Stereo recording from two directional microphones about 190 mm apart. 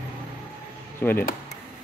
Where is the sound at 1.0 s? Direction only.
10° left (ahead or behind).